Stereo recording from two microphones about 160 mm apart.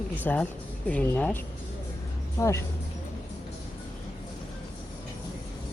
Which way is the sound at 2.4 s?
20° left (ahead or behind).